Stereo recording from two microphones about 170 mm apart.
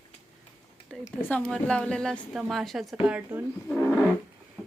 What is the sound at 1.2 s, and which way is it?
A woman's voice, 10° left (ahead or behind).